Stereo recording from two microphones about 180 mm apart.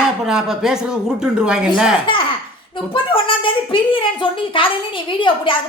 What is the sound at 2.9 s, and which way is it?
A woman's voice, 30° left (ahead or behind).